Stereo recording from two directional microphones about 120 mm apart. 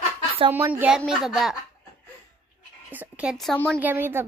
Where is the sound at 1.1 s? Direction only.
5° right (ahead or behind).